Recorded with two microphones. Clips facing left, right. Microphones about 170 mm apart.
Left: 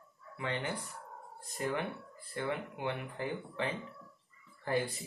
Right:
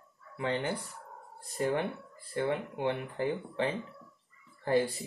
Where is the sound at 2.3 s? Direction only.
30° right (ahead or behind).